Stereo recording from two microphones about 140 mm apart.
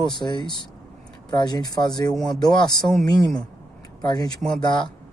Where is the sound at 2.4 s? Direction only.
30° left (ahead or behind).